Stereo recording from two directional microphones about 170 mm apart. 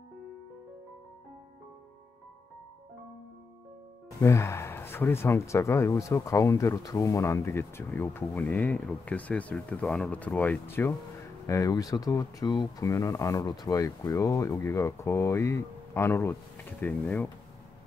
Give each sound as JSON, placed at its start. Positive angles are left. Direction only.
{"t": 4.2, "sound": "speech", "side_deg": 15}